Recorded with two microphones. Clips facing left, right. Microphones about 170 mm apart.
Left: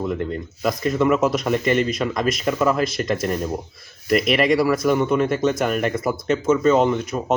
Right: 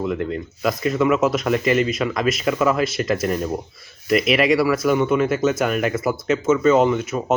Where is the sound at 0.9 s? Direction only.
5° right (ahead or behind).